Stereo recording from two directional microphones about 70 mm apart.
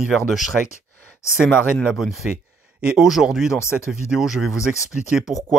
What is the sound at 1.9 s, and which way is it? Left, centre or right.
Speech, centre.